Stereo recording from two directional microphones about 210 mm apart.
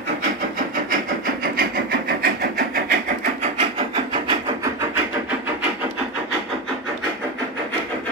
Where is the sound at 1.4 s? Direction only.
45° right (ahead or behind).